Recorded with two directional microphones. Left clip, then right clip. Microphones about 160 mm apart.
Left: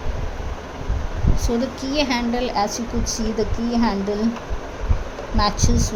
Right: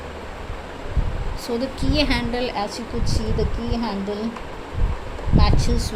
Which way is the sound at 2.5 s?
20° left (ahead or behind).